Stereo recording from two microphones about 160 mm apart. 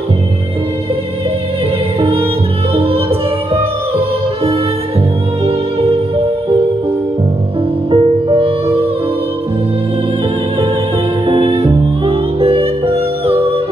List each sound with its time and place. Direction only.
2.0 s music: 40° right (ahead or behind)
7.9 s music: 35° right (ahead or behind)
11.2 s music: 35° right (ahead or behind)